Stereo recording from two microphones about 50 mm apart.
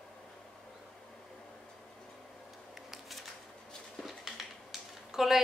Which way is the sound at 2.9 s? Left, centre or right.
Centre.